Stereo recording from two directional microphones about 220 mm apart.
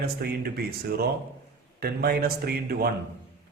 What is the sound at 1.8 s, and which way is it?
Speech, 45° right (ahead or behind).